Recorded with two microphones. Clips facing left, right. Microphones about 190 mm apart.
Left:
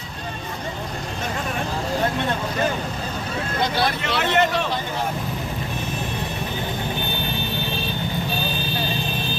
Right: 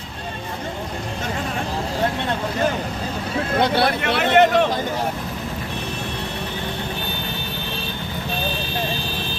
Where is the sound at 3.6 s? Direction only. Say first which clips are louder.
Right 3 dB; 60° right (ahead or behind).